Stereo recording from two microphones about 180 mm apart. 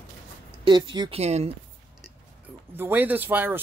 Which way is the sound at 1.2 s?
35° right (ahead or behind).